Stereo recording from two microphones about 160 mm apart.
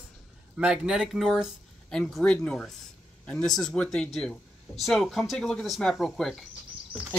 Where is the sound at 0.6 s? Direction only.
5° right (ahead or behind).